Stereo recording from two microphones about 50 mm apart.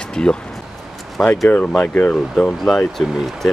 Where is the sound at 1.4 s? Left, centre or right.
Left.